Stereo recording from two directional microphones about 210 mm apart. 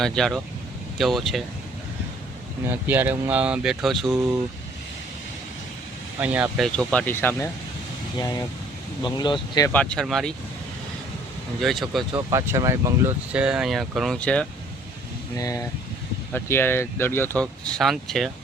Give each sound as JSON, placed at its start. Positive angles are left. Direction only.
{"t": 0.0, "sound": "speech", "side_deg": 0}
{"t": 2.6, "sound": "speech", "side_deg": -10}
{"t": 6.1, "sound": "speech", "side_deg": -5}
{"t": 6.7, "sound": "speech", "side_deg": 5}
{"t": 9.0, "sound": "speech", "side_deg": 20}
{"t": 9.7, "sound": "speech", "side_deg": 5}
{"t": 11.6, "sound": "speech", "side_deg": 0}
{"t": 12.1, "sound": "speech", "side_deg": -15}
{"t": 15.4, "sound": "speech", "side_deg": 15}